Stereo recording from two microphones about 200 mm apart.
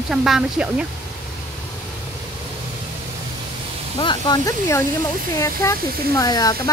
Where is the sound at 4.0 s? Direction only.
20° left (ahead or behind).